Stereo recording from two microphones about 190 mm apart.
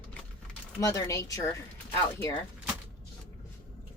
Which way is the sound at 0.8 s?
15° left (ahead or behind).